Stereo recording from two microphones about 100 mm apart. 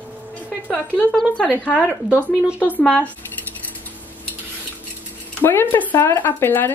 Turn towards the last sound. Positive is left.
turn(degrees=20)  # may be behind; listen again after turning